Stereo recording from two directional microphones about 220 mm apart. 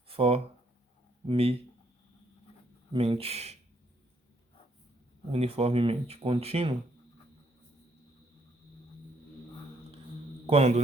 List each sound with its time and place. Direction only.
0.1 s a sound: 25° right (ahead or behind)
1.3 s speech: 25° right (ahead or behind)
2.9 s speech: 25° right (ahead or behind)
5.3 s speech: 30° right (ahead or behind)
10.4 s a man's voice: 30° right (ahead or behind)